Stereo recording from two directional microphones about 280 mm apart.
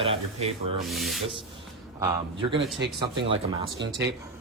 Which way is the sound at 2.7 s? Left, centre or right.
Right.